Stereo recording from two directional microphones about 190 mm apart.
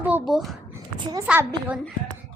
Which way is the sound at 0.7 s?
10° right (ahead or behind).